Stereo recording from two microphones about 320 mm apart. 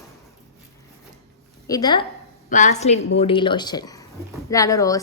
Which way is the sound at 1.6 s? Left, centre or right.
Centre.